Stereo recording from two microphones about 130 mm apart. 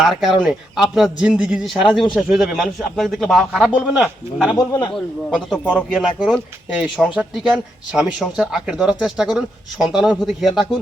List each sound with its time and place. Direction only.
0.0 s speech: centre (ahead or behind)
4.5 s speech: 30° left (ahead or behind)
5.3 s speech: 10° right (ahead or behind)